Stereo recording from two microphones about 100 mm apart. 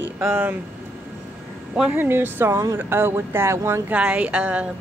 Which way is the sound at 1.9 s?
20° right (ahead or behind).